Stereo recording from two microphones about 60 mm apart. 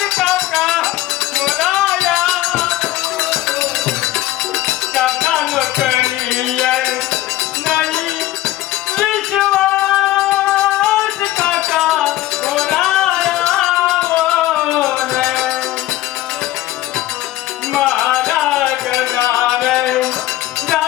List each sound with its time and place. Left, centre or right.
0.0 s music: centre
17.7 s music: centre